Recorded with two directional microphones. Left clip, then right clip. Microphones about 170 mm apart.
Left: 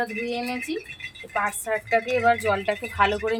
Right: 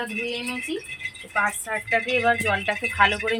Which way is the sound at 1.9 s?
30° left (ahead or behind).